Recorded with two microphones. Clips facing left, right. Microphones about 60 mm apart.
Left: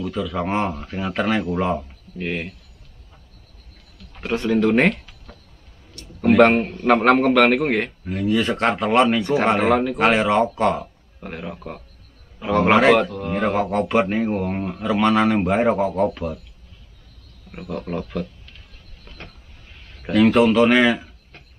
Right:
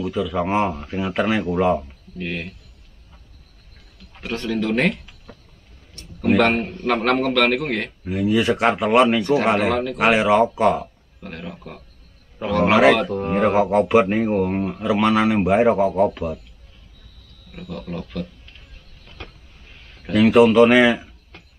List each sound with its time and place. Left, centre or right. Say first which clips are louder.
0.0 s a man's voice: right 2 dB; centre
2.1 s a man's voice: left 2 dB; centre
4.3 s a man's voice: left 4 dB; centre
5.0 s a sound: right 1 dB; centre
6.2 s a man's voice: left 3 dB; centre
8.0 s a man's voice: right 1 dB; centre
11.1 s a man's voice: left 2 dB; centre
12.6 s a man's voice: right 1 dB; centre
13.1 s a man's voice: right 4 dB; right
13.4 s a man's voice: right 4 dB; centre
17.5 s speech: left 3 dB; left
20.1 s a man's voice: right 2 dB; centre